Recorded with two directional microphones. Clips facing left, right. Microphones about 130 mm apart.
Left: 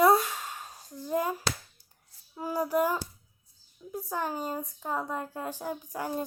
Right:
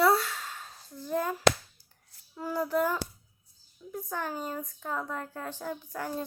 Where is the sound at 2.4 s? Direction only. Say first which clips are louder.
Left 1 dB; 15° left (ahead or behind).